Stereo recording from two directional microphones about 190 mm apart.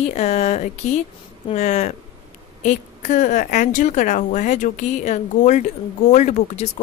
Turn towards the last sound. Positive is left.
turn(degrees=35)  # may be behind; listen again after turning